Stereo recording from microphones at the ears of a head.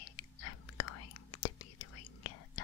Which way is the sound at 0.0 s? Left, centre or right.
Left.